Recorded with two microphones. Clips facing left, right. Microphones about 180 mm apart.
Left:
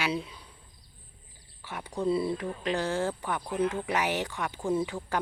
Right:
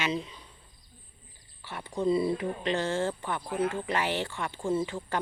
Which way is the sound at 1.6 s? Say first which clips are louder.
Left 1 dB; 15° left (ahead or behind).